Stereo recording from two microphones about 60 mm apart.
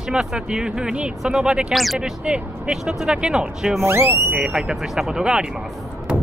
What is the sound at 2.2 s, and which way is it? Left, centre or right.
Speech, centre.